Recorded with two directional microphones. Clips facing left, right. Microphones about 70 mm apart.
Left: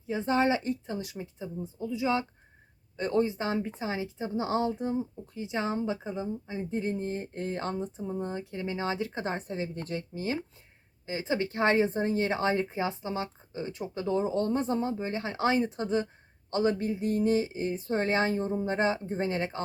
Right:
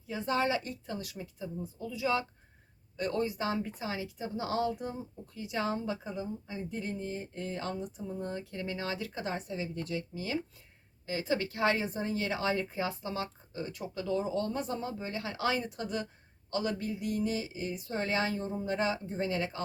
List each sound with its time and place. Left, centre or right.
0.1 s a woman's voice: left
11.0 s speech: left